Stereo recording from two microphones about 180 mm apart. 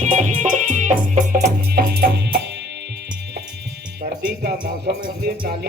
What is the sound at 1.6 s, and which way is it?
Music, 60° right (ahead or behind).